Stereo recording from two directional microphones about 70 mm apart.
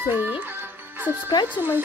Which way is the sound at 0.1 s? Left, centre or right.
Right.